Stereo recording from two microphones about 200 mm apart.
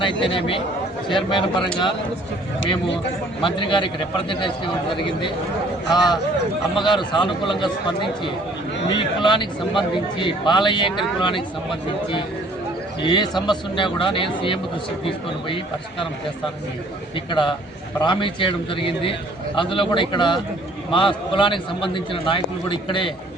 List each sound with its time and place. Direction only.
0.0 s a man's voice: 25° left (ahead or behind)
3.4 s a man's voice: 25° left (ahead or behind)
8.9 s a man's voice: 25° left (ahead or behind)
17.2 s a man's voice: 25° left (ahead or behind)